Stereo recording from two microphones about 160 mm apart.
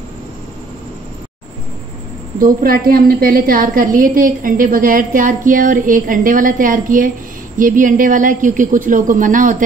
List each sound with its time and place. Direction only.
2.3 s a woman's voice: 65° right (ahead or behind)